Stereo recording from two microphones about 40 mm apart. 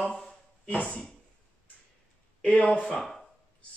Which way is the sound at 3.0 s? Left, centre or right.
Centre.